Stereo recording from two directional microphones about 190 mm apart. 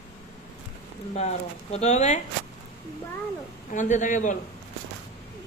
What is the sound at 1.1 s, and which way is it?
Speech, 35° left (ahead or behind).